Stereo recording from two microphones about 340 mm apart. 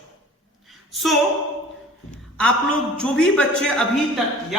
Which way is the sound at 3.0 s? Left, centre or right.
Centre.